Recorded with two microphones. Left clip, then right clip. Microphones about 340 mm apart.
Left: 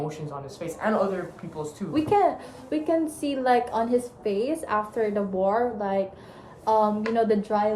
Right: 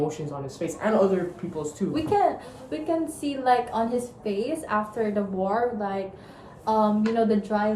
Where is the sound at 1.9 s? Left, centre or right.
Centre.